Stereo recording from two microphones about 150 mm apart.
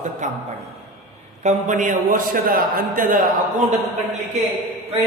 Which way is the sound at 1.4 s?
55° right (ahead or behind).